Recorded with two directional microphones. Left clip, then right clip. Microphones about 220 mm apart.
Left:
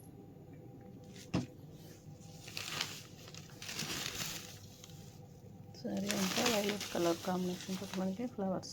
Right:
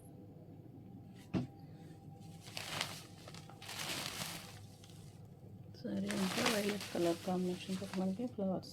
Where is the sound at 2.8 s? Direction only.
10° right (ahead or behind).